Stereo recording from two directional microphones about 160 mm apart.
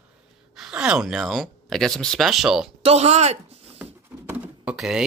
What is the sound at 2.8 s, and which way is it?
Speech, 40° right (ahead or behind).